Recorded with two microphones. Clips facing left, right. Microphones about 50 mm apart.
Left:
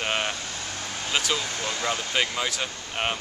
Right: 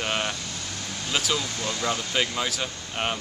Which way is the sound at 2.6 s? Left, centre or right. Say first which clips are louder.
Even; centre.